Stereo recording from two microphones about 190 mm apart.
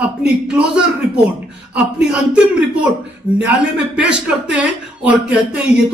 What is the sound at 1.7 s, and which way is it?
Speech, 5° right (ahead or behind).